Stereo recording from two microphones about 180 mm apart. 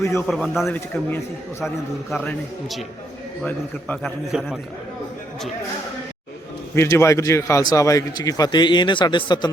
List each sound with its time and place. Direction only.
0.0 s a man's voice: 15° left (ahead or behind)
0.3 s a man's voice: centre (ahead or behind)
6.7 s a man's voice: 15° left (ahead or behind)